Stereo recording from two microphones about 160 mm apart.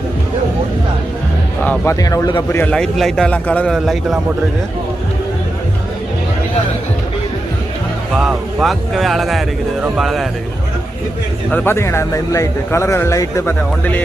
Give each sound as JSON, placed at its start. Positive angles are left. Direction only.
{"t": 1.6, "sound": "a man's voice", "side_deg": 15}
{"t": 2.6, "sound": "a man's voice", "side_deg": 5}
{"t": 3.8, "sound": "speech", "side_deg": -5}
{"t": 8.1, "sound": "speech", "side_deg": -5}
{"t": 11.5, "sound": "a man's voice", "side_deg": 15}